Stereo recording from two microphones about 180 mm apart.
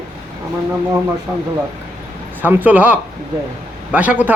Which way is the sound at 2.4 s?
10° right (ahead or behind).